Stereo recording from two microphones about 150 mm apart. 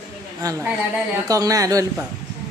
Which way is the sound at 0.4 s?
25° right (ahead or behind).